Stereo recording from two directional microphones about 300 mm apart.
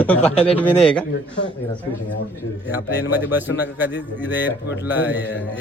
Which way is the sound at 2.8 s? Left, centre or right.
Left.